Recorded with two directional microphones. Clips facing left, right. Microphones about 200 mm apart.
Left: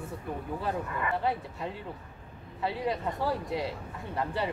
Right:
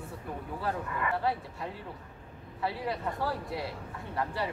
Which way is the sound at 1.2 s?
20° left (ahead or behind).